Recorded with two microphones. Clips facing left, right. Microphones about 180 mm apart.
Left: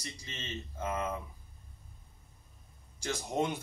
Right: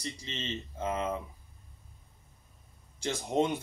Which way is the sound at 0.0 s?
25° right (ahead or behind).